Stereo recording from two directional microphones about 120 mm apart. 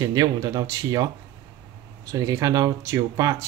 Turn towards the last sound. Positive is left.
turn(degrees=-30)  # may be behind; listen again after turning